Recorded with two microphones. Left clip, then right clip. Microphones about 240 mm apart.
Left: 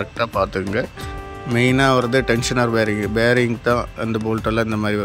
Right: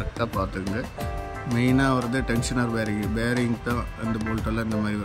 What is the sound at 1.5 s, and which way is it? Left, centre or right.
Speech, centre.